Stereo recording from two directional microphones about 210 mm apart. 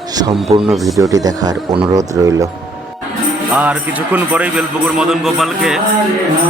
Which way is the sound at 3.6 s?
5° right (ahead or behind).